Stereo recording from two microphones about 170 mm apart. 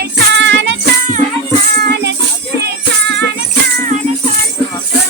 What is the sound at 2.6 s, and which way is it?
Music, 90° right.